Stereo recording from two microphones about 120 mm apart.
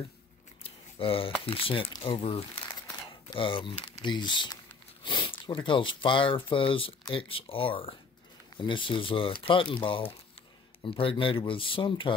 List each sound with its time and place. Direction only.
0.7 s speech: 50° left (ahead or behind)